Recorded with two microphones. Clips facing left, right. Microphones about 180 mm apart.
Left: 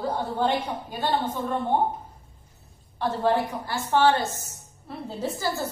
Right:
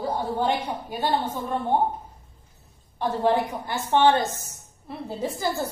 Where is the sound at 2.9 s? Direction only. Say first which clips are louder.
Right 1 dB; 15° right (ahead or behind).